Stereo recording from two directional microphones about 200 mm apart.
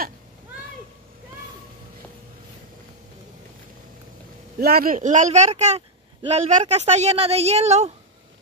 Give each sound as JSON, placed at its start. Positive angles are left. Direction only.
{"t": 4.6, "sound": "speech", "side_deg": -50}